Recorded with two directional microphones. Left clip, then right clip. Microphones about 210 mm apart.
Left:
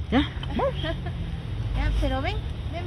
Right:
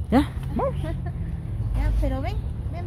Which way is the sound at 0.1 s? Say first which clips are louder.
Right 3 dB; 25° right (ahead or behind).